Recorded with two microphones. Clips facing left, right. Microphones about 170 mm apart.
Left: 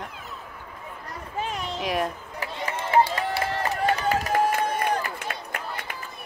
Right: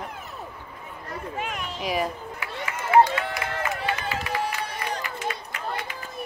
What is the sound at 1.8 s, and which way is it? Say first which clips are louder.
Speech: even; centre (ahead or behind).